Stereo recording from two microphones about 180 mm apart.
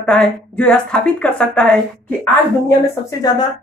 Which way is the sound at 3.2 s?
20° left (ahead or behind).